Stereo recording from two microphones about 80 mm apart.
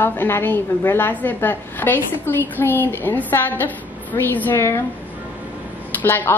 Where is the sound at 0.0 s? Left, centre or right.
Left.